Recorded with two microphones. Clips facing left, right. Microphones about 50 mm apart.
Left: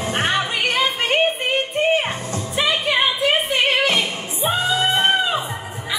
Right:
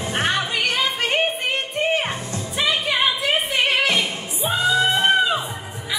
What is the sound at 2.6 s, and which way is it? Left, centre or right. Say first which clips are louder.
Music: left 2 dB; centre.